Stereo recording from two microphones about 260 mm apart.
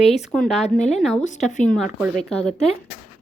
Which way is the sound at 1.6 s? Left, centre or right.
Centre.